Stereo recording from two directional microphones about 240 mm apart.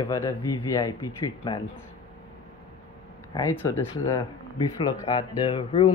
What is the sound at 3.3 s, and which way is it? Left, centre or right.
Speech, centre.